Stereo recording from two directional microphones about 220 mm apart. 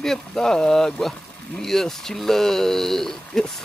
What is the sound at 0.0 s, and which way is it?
Speech, centre (ahead or behind).